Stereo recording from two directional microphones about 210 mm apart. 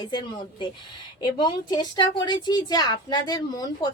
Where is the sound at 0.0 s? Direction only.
20° left (ahead or behind).